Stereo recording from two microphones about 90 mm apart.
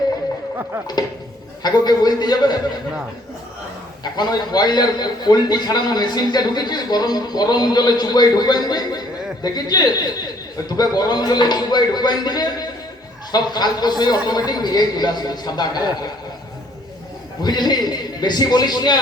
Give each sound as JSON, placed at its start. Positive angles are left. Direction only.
{"t": 1.6, "sound": "a man's voice", "side_deg": 50}
{"t": 4.0, "sound": "a man's voice", "side_deg": 50}
{"t": 17.4, "sound": "a man's voice", "side_deg": 50}